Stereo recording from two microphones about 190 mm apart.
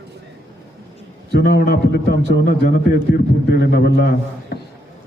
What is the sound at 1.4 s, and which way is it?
Speech, 60° left (ahead or behind).